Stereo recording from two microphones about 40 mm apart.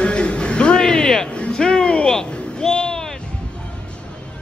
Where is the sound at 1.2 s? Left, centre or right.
Left.